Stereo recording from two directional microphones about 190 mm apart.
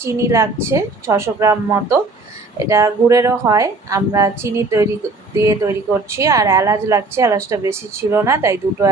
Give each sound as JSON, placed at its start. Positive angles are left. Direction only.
{"t": 0.0, "sound": "a woman's voice", "side_deg": -15}